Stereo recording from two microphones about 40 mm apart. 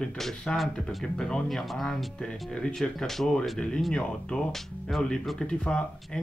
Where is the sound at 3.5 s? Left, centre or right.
Left.